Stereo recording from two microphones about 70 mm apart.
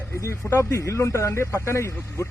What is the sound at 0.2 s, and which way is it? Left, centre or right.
Speech, left.